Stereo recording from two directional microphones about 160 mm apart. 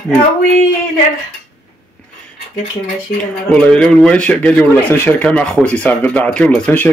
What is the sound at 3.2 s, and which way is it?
Speech, 5° left (ahead or behind).